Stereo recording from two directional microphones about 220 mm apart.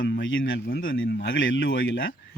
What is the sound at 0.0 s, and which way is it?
Speech, 60° left (ahead or behind).